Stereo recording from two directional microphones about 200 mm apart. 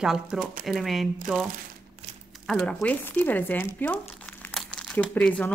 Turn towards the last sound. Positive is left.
turn(degrees=5)  # may be behind; listen again after turning